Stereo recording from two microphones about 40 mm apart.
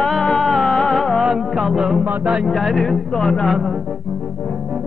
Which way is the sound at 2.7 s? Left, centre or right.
Centre.